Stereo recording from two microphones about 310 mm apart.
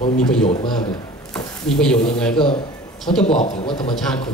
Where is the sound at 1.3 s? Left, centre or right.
Centre.